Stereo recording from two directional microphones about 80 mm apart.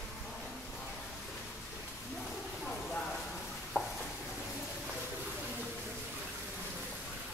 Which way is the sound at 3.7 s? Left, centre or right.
Left.